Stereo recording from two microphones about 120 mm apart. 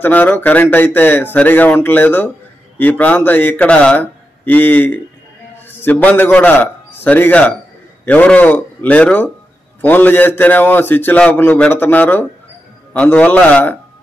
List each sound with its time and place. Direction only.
0.0 s a man's voice: 15° left (ahead or behind)